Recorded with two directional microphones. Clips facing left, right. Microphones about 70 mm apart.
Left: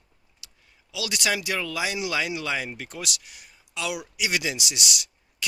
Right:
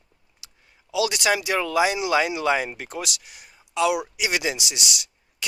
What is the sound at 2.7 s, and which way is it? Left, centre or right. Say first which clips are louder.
Speech: right 3 dB; centre.